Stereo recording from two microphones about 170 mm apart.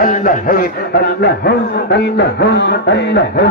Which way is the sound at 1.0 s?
75° left (ahead or behind).